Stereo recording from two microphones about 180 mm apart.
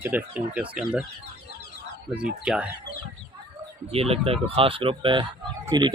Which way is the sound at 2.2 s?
5° right (ahead or behind).